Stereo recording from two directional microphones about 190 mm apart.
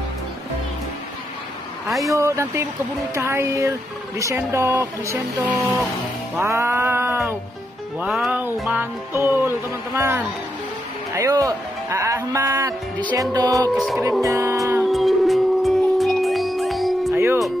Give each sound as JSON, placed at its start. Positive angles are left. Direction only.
{"t": 2.0, "sound": "speech", "side_deg": -15}
{"t": 13.7, "sound": "music", "side_deg": 0}
{"t": 14.2, "sound": "speech", "side_deg": -15}
{"t": 14.9, "sound": "music", "side_deg": 0}
{"t": 17.1, "sound": "music", "side_deg": -10}